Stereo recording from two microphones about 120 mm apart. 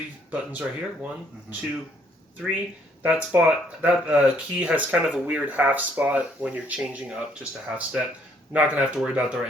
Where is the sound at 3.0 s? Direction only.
15° right (ahead or behind).